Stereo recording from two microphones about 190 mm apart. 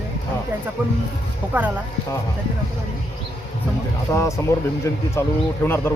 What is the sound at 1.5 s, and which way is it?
Speech, 10° right (ahead or behind).